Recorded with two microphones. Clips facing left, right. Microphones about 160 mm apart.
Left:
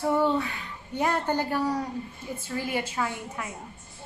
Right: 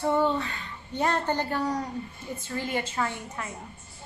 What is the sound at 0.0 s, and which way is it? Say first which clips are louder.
A woman's voice: left 1 dB; 10° left (ahead or behind).